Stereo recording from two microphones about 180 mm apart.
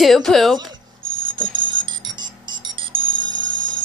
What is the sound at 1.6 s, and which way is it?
Music, 25° right (ahead or behind).